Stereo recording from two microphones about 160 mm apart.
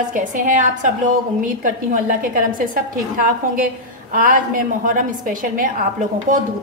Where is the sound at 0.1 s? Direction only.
55° right (ahead or behind).